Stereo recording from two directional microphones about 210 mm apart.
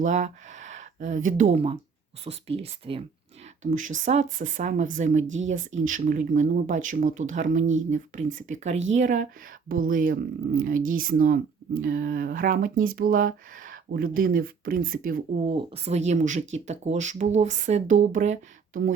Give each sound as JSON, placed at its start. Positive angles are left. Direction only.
{"t": 0.0, "sound": "speech", "side_deg": -35}
{"t": 3.6, "sound": "speech", "side_deg": -35}
{"t": 15.4, "sound": "speech", "side_deg": -30}